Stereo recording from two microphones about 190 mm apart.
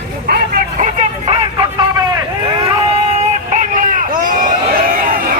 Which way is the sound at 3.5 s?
45° right (ahead or behind).